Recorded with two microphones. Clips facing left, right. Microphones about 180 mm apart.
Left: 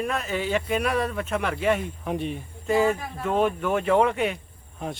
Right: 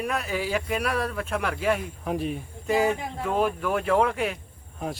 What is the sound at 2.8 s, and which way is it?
Speech, 20° right (ahead or behind).